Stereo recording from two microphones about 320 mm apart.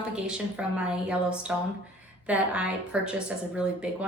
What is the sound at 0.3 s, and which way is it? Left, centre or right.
A woman's voice, centre.